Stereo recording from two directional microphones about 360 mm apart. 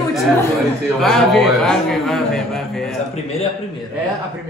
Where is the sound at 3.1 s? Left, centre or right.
Centre.